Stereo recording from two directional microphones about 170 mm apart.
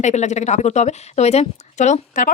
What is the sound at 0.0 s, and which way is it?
Speech, 45° left (ahead or behind).